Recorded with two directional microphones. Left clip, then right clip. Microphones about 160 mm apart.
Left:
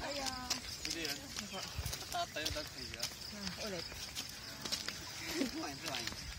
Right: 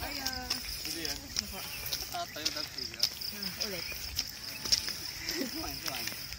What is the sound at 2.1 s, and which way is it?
Speech, 20° left (ahead or behind).